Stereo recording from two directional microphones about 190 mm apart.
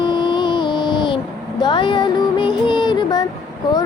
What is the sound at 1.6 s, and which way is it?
Music, 25° left (ahead or behind).